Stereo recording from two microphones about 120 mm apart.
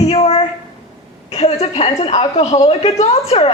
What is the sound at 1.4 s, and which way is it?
A woman's voice, 65° left (ahead or behind).